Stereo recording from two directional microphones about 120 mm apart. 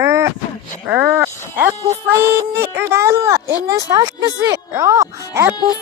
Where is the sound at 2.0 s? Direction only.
20° right (ahead or behind).